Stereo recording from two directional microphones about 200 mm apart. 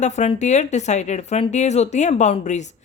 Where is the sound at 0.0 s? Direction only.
35° left (ahead or behind).